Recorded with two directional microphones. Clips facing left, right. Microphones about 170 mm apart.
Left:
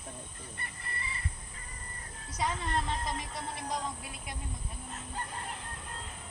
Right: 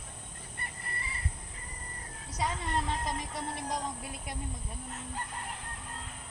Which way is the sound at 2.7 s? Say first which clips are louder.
Right 1 dB; 10° right (ahead or behind).